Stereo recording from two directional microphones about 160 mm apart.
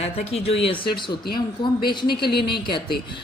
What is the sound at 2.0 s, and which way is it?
Speech, 85° left.